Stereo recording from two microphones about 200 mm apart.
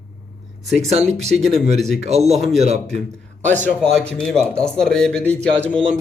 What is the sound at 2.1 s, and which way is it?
Speech, 35° right (ahead or behind).